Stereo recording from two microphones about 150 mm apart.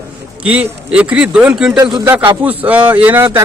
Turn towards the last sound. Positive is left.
turn(degrees=-10)  # may be behind; listen again after turning